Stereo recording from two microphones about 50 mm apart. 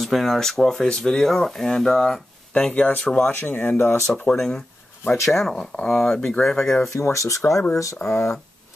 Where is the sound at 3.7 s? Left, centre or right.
Left.